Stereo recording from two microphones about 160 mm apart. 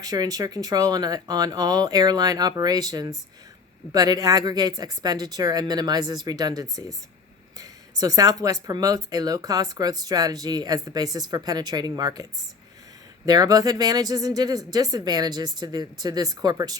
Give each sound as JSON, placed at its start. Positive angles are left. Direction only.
{"t": 0.0, "sound": "speech", "side_deg": -25}
{"t": 13.2, "sound": "speech", "side_deg": -25}